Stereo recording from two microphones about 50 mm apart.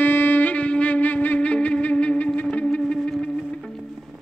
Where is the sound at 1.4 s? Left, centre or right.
Left.